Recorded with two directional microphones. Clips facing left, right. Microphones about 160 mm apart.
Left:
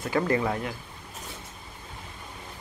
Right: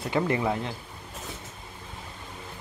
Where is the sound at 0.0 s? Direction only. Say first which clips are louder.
Left 1 dB; 25° right (ahead or behind).